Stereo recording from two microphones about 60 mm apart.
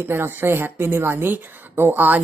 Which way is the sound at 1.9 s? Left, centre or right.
Right.